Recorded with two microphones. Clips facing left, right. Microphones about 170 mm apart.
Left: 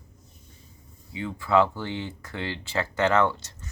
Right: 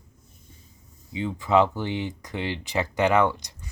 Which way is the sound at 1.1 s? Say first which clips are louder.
Right 1 dB; 20° right (ahead or behind).